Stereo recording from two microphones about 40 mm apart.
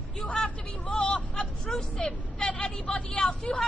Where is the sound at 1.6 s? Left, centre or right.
Centre.